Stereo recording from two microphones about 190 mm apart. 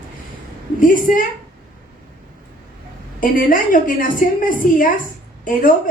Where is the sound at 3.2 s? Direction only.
45° left (ahead or behind).